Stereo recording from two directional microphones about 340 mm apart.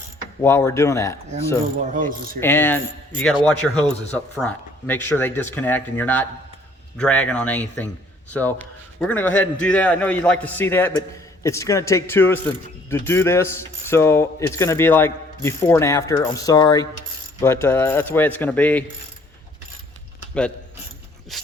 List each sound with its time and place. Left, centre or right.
0.4 s mechanisms: centre
1.9 s mechanisms: right
2.4 s a man's voice: centre
11.4 s mechanisms: centre
17.4 s a man's voice: centre
21.3 s a man's voice: centre